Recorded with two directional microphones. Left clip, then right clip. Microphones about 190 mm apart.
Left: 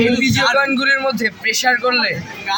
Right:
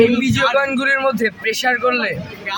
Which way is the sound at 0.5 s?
15° right (ahead or behind).